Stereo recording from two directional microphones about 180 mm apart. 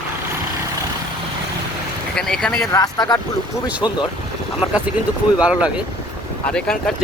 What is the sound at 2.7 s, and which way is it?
Speech, 20° left (ahead or behind).